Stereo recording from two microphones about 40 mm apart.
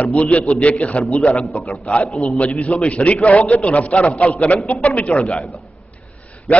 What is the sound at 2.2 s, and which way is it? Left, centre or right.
A man's voice, left.